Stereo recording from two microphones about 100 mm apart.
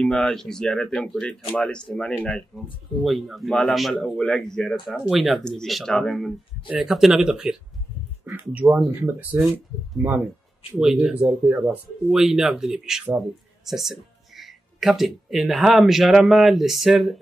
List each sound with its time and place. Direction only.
0.0 s speech: 5° left (ahead or behind)
8.4 s speech: 15° right (ahead or behind)